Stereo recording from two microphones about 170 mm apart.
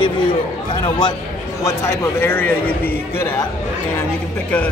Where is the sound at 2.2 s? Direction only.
10° left (ahead or behind).